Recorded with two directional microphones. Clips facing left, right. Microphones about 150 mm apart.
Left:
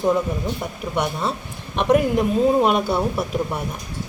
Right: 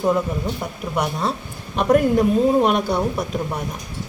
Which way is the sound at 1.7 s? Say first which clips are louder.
Right 1 dB; centre (ahead or behind).